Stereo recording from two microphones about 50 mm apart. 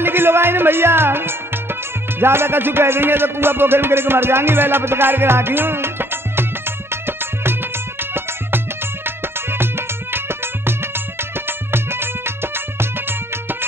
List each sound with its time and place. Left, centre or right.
0.0 s music: right
9.0 s music: right